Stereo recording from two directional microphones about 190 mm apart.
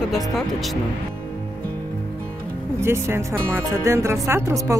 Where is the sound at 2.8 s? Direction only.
15° right (ahead or behind).